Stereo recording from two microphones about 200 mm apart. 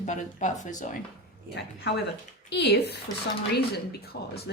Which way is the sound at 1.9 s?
55° left (ahead or behind).